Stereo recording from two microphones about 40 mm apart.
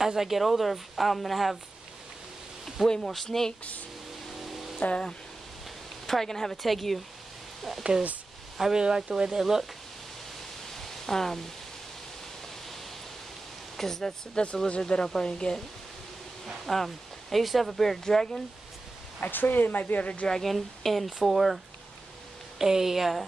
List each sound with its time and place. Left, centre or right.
0.0 s speech: centre
3.0 s speech: centre
4.3 s music: centre
4.7 s speech: left
6.0 s speech: centre
8.7 s speech: centre
10.8 s pink noise: centre
13.7 s speech: centre
14.3 s speech: left
14.8 s speech: centre
16.6 s speech: centre
19.2 s speech: left
20.4 s speech: centre
22.6 s speech: centre